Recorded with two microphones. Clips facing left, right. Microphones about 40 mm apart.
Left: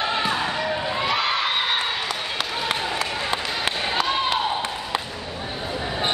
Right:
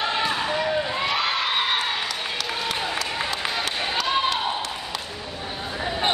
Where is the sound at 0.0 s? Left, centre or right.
Centre.